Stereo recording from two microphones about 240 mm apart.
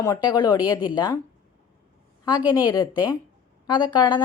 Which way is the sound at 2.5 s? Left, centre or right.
Centre.